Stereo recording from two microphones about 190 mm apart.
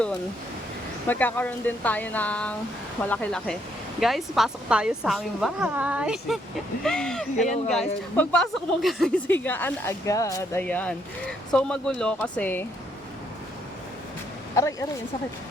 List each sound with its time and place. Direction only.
1.0 s a woman's voice: 10° left (ahead or behind)
14.5 s speech: 15° left (ahead or behind)